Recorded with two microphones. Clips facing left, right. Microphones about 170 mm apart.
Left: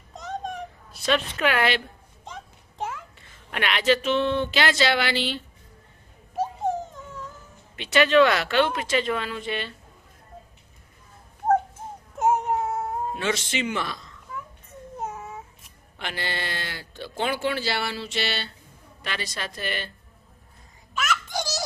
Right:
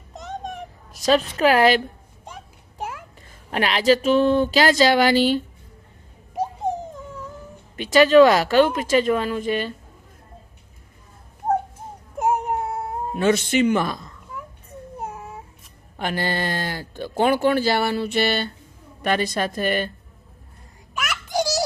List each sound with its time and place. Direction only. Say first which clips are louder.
1.0 s speech: right 6 dB; 35° right (ahead or behind)
2.2 s a sound: even; 10° right (ahead or behind)
3.2 s speech: right 9 dB; 35° right (ahead or behind)
7.8 s speech: right 6 dB; 40° right (ahead or behind)
12.2 s a sound: even; 10° right (ahead or behind)
13.1 s speech: right 13 dB; 50° right (ahead or behind)
14.9 s baby cry: even; 10° right (ahead or behind)
16.0 s speech: right 7 dB; 45° right (ahead or behind)
20.9 s a sound: right 3 dB; 10° right (ahead or behind)